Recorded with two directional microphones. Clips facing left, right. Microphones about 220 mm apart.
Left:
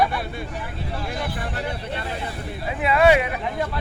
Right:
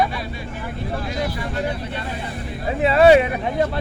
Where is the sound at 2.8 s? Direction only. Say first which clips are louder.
Right 5 dB; 30° right (ahead or behind).